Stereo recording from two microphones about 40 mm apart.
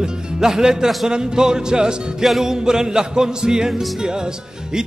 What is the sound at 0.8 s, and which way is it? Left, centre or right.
Speech, centre.